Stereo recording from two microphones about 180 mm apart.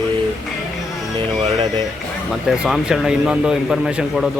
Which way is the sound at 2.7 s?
5° right (ahead or behind).